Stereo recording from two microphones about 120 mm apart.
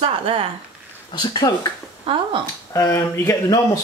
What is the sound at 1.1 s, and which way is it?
Speech, 35° left (ahead or behind).